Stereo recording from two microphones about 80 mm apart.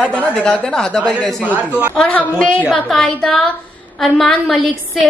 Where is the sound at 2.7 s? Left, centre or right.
Centre.